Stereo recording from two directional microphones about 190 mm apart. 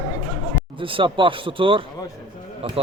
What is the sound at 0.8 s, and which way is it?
Speech, 25° right (ahead or behind).